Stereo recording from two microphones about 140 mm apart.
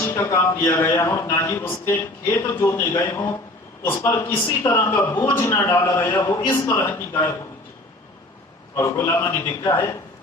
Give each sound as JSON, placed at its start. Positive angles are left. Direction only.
{"t": 0.0, "sound": "a sound", "side_deg": 15}
{"t": 0.6, "sound": "a man's voice", "side_deg": 20}
{"t": 4.4, "sound": "a man's voice", "side_deg": 20}
{"t": 6.1, "sound": "a man's voice", "side_deg": 30}
{"t": 6.5, "sound": "a man's voice", "side_deg": 20}
{"t": 8.7, "sound": "a man's voice", "side_deg": 20}